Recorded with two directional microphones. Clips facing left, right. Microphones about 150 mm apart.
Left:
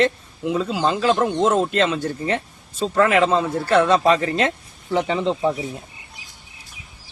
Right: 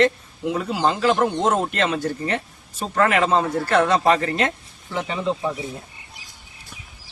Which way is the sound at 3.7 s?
20° left (ahead or behind).